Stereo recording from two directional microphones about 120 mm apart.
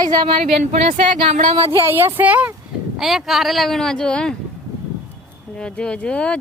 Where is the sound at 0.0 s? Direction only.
35° right (ahead or behind).